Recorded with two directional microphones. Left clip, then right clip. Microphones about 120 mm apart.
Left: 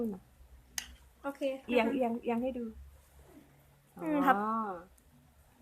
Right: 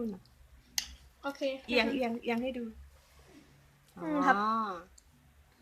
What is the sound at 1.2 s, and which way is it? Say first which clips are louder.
Speech: right 1 dB; 15° left (ahead or behind).